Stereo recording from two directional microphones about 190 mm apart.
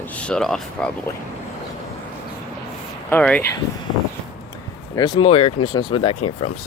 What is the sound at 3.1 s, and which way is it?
Speech, 5° left (ahead or behind).